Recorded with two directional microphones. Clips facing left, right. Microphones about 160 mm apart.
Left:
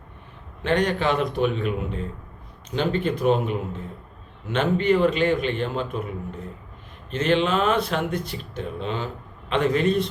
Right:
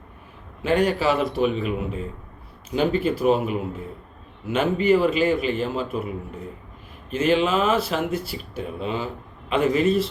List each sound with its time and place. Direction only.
0.6 s a man's voice: 5° right (ahead or behind)
7.1 s a man's voice: 5° right (ahead or behind)